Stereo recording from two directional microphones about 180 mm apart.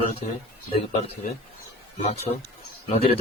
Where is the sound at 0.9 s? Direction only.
35° left (ahead or behind).